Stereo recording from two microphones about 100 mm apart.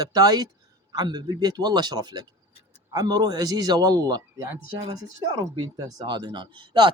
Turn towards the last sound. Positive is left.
turn(degrees=-50)  # may be behind; listen again after turning